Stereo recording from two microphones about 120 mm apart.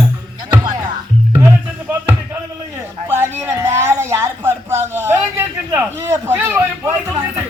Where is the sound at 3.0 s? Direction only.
20° right (ahead or behind).